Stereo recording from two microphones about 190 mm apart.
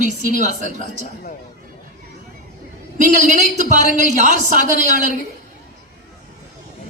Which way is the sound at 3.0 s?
40° right (ahead or behind).